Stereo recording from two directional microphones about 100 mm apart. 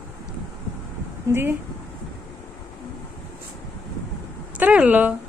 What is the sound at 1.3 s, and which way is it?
Speech, 25° right (ahead or behind).